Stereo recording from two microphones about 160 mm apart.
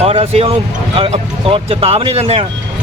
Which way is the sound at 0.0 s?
40° right (ahead or behind).